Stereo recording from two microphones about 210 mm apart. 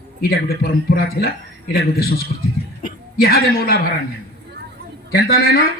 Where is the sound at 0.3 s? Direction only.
45° left (ahead or behind).